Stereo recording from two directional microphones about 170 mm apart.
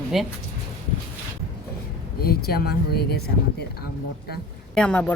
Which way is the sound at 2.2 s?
65° left (ahead or behind).